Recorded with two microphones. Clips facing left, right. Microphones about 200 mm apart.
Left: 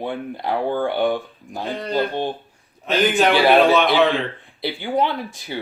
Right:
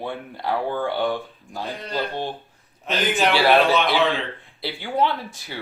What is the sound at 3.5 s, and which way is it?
Speech, centre (ahead or behind).